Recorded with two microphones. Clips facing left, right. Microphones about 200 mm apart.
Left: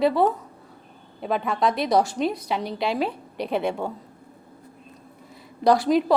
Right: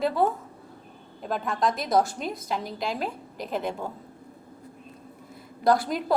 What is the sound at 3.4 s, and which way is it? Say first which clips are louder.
Speech: left 5 dB; 70° left (ahead or behind).